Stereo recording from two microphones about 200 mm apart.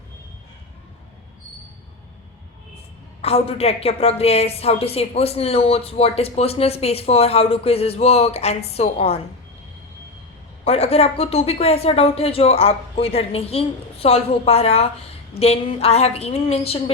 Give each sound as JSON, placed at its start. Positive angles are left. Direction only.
{"t": 3.2, "sound": "a woman's voice", "side_deg": 30}
{"t": 10.6, "sound": "a woman's voice", "side_deg": 30}